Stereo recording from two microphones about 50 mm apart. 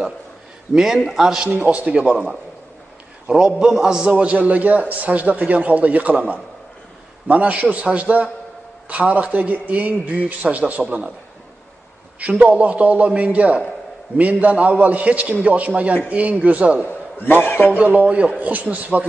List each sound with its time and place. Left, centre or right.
0.9 s a man's voice: centre
1.6 s a man's voice: right
4.3 s a man's voice: right
12.2 s a man's voice: right
16.8 s a man's voice: left
17.7 s a man's voice: right